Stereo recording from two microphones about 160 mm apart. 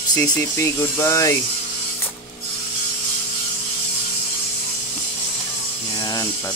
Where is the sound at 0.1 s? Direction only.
20° left (ahead or behind).